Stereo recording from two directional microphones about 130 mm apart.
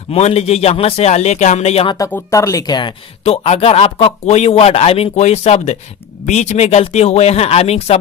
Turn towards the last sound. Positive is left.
turn(degrees=50)  # may be behind; listen again after turning